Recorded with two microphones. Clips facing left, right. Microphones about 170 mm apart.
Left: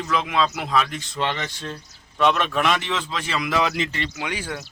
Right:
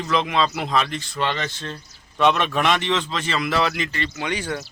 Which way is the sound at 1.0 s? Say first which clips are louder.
Right 1 dB; 15° left (ahead or behind).